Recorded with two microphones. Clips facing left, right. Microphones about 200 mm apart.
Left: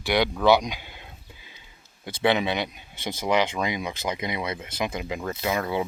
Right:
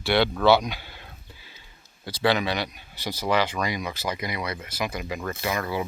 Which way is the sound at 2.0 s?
20° left (ahead or behind).